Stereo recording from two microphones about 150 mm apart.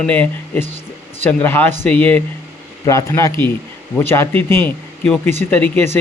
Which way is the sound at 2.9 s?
20° left (ahead or behind).